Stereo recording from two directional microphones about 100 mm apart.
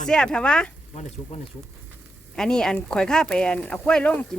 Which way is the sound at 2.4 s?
5° left (ahead or behind).